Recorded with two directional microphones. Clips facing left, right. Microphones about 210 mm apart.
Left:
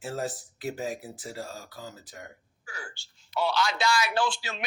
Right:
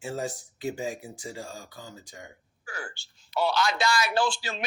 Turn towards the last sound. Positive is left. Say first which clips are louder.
# right 2 dB
turn(degrees=-35)  # may be behind; listen again after turning